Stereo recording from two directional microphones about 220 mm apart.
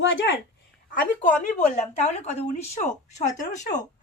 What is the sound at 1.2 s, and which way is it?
Speech, 35° left (ahead or behind).